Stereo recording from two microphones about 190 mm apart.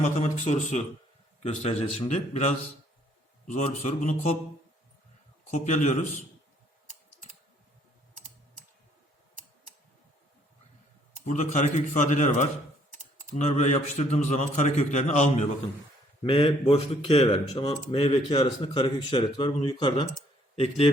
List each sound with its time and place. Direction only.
0.0 s a man's voice: 35° left (ahead or behind)
5.5 s a man's voice: 40° left (ahead or behind)
11.3 s a man's voice: 40° left (ahead or behind)